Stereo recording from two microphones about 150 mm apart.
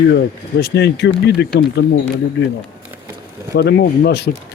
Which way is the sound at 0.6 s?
90° left.